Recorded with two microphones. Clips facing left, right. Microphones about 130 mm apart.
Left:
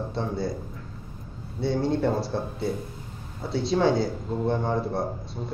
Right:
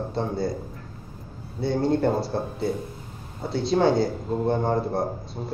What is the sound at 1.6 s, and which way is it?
A man's voice, centre (ahead or behind).